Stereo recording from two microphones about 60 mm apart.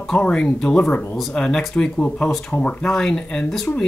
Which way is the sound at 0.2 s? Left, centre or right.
Centre.